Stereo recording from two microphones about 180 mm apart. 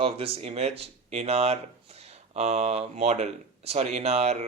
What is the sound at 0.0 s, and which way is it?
Speech, 35° right (ahead or behind).